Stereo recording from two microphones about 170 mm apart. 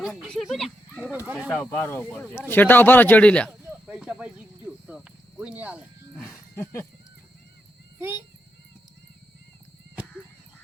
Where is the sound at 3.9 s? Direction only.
5° right (ahead or behind).